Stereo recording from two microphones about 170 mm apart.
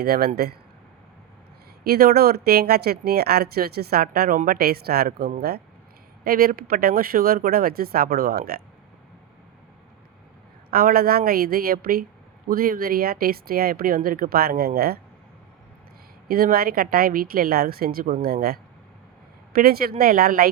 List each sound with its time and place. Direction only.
0.0 s speech: 65° right (ahead or behind)
1.8 s speech: 65° right (ahead or behind)
10.7 s speech: 60° right (ahead or behind)
16.3 s speech: 60° right (ahead or behind)